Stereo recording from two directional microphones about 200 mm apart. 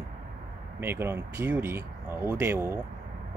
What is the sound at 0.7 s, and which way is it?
Speech, 10° right (ahead or behind).